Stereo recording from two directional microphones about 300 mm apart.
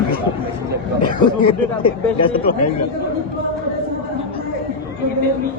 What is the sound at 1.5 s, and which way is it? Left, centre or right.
Speech, centre.